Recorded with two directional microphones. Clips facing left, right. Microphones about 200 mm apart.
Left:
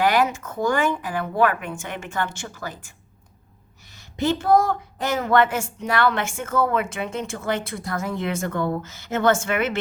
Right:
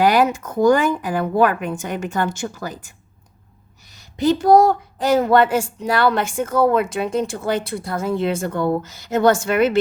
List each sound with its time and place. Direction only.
0.0 s a woman's voice: 35° right (ahead or behind)
4.4 s a woman's voice: 35° right (ahead or behind)